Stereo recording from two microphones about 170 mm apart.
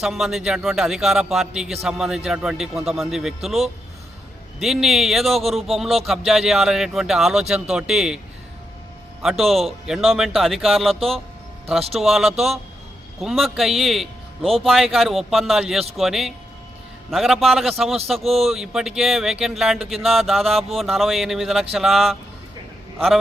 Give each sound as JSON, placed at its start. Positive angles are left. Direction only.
{"t": 0.0, "sound": "speech", "side_deg": 0}
{"t": 9.4, "sound": "speech", "side_deg": 0}
{"t": 18.2, "sound": "speech", "side_deg": -35}
{"t": 18.4, "sound": "speech", "side_deg": 0}